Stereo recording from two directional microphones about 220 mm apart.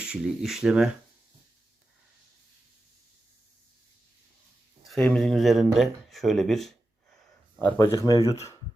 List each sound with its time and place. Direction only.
0.0 s speech: 5° right (ahead or behind)
4.9 s speech: 5° left (ahead or behind)
7.6 s speech: 15° left (ahead or behind)